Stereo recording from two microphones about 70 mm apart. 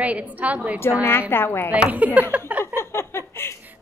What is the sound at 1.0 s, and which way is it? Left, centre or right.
Speech, left.